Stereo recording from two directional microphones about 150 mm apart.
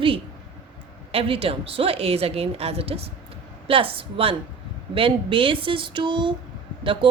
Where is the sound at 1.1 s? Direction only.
40° right (ahead or behind).